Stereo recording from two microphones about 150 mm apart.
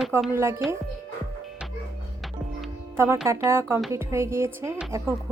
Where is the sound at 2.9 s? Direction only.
15° right (ahead or behind).